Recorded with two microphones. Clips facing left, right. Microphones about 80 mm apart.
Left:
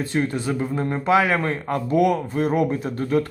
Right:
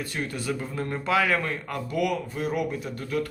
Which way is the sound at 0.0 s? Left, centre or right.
Left.